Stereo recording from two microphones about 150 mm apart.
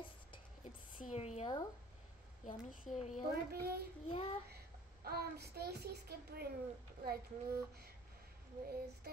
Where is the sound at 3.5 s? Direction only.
90° right.